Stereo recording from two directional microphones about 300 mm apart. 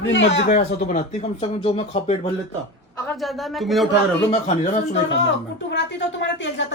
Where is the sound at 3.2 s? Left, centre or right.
Centre.